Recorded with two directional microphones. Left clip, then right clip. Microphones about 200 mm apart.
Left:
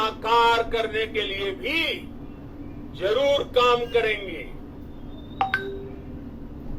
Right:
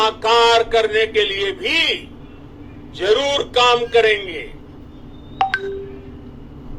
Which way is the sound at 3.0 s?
50° right (ahead or behind).